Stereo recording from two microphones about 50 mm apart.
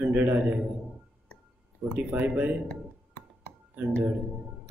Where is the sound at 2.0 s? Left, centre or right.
Right.